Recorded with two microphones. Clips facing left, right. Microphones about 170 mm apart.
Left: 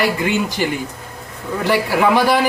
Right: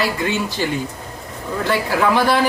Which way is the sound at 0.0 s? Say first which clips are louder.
Left 3 dB; 15° left (ahead or behind).